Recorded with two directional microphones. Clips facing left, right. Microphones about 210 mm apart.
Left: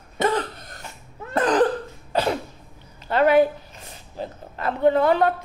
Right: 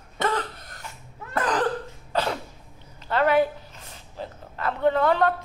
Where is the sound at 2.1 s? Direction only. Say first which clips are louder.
Left 4 dB; 15° left (ahead or behind).